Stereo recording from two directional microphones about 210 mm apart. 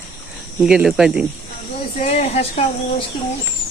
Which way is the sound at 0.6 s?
5° right (ahead or behind).